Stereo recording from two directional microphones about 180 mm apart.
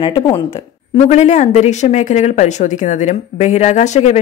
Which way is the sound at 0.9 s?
40° left (ahead or behind).